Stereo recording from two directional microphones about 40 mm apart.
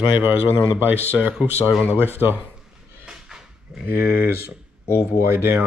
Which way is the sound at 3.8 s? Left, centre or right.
Right.